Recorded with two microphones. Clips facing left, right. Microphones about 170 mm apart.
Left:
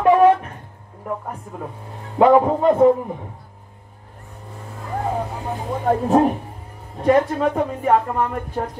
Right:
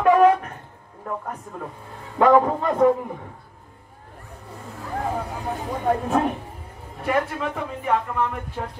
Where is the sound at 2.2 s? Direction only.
20° left (ahead or behind).